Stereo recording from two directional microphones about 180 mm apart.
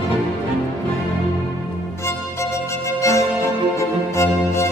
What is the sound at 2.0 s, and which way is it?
Music, 15° left (ahead or behind).